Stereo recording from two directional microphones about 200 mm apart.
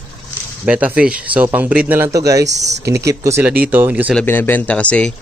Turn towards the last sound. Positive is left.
turn(degrees=5)  # may be behind; listen again after turning